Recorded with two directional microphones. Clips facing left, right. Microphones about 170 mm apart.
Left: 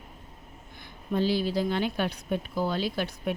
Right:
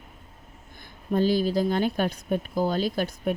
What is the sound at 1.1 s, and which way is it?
A woman's voice, 45° right (ahead or behind).